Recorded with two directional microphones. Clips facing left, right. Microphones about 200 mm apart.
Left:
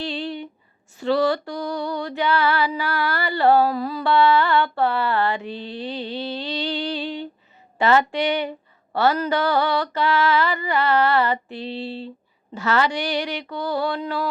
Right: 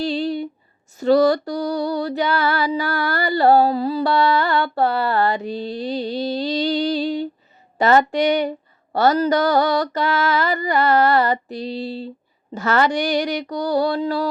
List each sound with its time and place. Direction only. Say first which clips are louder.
0.0 s a sound: right 6 dB; 40° right (ahead or behind)
0.9 s female singing: right 5 dB; 40° right (ahead or behind)
7.8 s a woman's voice: right 3 dB; 45° right (ahead or behind)